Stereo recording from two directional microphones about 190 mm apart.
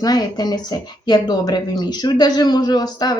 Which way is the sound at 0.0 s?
20° left (ahead or behind).